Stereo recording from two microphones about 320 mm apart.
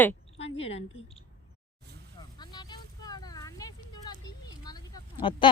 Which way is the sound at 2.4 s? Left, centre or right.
Centre.